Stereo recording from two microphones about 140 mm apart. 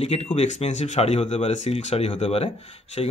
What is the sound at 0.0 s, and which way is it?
A man's voice, 50° left (ahead or behind).